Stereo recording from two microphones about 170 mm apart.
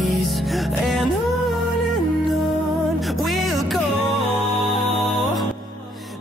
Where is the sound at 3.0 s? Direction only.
Centre (ahead or behind).